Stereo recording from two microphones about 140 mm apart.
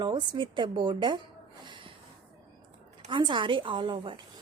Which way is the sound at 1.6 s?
35° right (ahead or behind).